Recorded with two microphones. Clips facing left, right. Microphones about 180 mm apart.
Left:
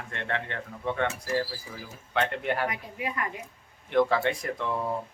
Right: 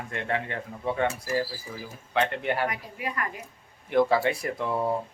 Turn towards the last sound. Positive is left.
turn(degrees=-10)  # may be behind; listen again after turning